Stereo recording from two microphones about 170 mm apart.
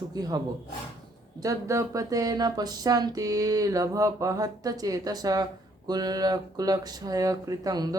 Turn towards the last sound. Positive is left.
turn(degrees=-20)  # may be behind; listen again after turning